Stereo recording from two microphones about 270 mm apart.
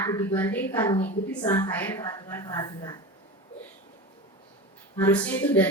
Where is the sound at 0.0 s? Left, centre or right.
Centre.